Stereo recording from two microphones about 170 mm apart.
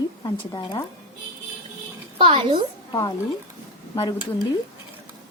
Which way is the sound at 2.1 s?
30° right (ahead or behind).